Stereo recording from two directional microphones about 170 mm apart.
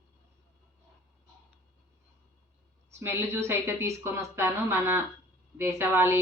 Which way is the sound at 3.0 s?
15° right (ahead or behind).